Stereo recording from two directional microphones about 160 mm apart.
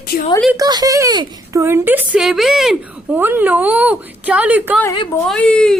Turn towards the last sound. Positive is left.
turn(degrees=5)  # may be behind; listen again after turning